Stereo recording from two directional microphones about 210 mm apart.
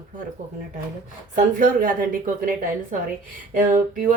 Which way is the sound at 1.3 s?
40° right (ahead or behind).